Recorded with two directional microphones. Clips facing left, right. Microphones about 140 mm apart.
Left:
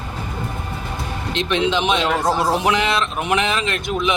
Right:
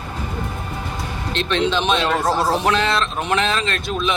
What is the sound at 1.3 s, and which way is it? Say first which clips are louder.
A man's voice: even; 15° left (ahead or behind).